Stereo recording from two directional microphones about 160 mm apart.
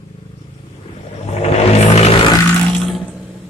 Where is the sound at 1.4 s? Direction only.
40° left (ahead or behind).